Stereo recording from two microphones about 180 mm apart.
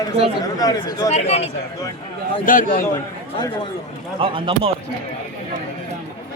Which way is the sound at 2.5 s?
50° left (ahead or behind).